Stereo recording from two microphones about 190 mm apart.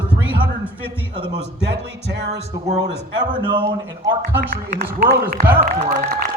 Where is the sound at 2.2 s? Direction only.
60° right (ahead or behind).